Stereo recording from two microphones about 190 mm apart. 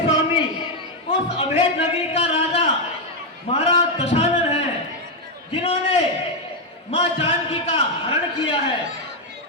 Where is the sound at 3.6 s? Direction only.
35° left (ahead or behind).